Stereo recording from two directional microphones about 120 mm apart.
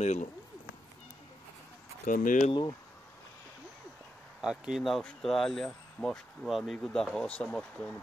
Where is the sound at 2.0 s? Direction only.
90° left.